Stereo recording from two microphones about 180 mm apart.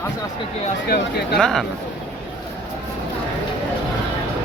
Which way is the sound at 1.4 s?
Centre (ahead or behind).